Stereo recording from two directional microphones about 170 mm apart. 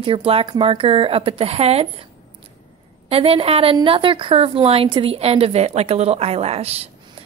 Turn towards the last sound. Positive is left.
turn(degrees=-35)  # may be behind; listen again after turning